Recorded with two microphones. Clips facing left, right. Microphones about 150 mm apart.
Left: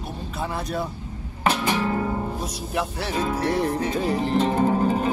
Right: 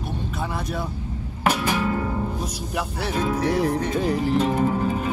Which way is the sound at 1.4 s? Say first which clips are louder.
Even; 5° right (ahead or behind).